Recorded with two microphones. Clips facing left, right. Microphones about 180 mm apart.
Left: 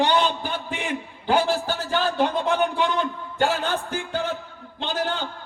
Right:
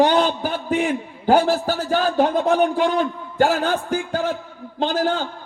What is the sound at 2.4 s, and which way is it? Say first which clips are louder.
Speech: right 5 dB; 45° right (ahead or behind).